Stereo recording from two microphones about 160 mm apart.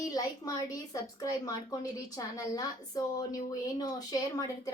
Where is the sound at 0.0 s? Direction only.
25° left (ahead or behind).